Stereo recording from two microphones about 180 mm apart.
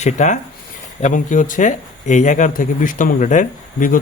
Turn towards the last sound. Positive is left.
turn(degrees=45)  # may be behind; listen again after turning